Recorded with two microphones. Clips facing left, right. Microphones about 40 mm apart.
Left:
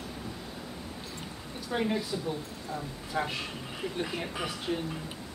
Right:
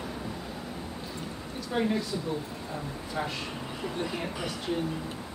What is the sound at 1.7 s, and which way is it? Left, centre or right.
Speech, centre.